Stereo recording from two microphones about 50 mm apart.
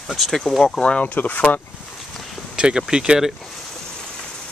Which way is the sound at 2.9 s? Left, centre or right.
Centre.